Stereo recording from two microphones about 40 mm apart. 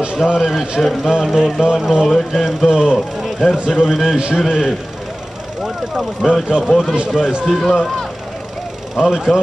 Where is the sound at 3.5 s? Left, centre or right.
Right.